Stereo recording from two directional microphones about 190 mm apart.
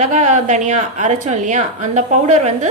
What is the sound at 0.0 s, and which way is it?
A woman's voice, 40° right (ahead or behind).